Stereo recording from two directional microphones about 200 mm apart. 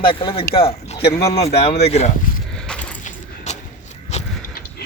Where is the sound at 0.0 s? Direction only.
25° left (ahead or behind).